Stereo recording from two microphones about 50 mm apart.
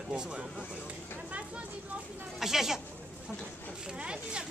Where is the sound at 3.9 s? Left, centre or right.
Centre.